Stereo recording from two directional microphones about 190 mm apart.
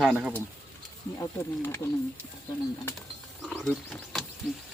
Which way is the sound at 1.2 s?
15° left (ahead or behind).